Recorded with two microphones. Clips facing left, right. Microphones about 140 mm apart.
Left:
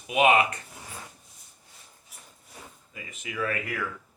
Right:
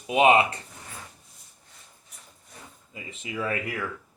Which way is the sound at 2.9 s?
25° right (ahead or behind).